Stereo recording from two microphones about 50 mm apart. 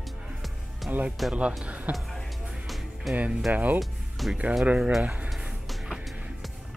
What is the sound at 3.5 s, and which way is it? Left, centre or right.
Speech, right.